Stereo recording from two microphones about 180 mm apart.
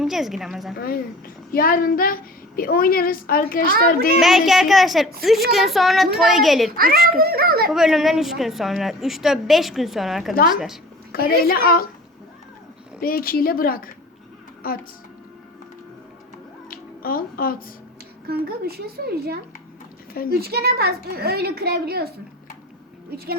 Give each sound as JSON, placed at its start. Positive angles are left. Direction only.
{"t": 0.0, "sound": "a woman's voice", "side_deg": 0}
{"t": 0.8, "sound": "a woman's voice", "side_deg": 55}
{"t": 4.2, "sound": "a woman's voice", "side_deg": 0}
{"t": 6.7, "sound": "a child's voice", "side_deg": -55}
{"t": 7.7, "sound": "a woman's voice", "side_deg": 0}
{"t": 11.1, "sound": "speech", "side_deg": 55}
{"t": 13.0, "sound": "a woman's voice", "side_deg": 55}
{"t": 16.6, "sound": "a sound", "side_deg": 55}
{"t": 18.3, "sound": "a child's voice", "side_deg": -60}
{"t": 23.1, "sound": "a child's voice", "side_deg": -60}